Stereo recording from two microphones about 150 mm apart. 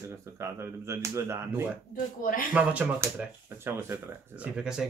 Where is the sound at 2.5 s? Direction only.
10° right (ahead or behind).